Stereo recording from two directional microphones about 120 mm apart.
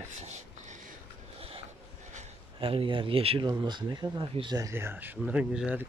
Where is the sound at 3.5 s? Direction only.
35° right (ahead or behind).